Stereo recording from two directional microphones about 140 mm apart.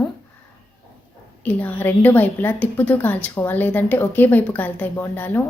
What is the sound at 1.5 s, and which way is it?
A woman's voice, 15° left (ahead or behind).